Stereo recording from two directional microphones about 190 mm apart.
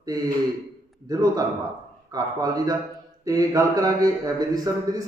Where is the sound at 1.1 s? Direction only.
20° right (ahead or behind).